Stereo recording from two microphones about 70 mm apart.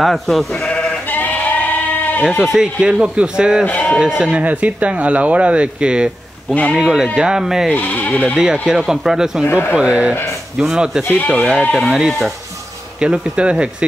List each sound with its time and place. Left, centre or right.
0.0 s speech: centre
0.5 s sheep: centre
2.4 s speech: centre
3.6 s speech: left
4.2 s speech: centre
7.7 s speech: left
8.4 s speech: centre
9.5 s speech: left
9.8 s speech: centre
10.6 s speech: centre
11.2 s speech: centre
13.0 s speech: centre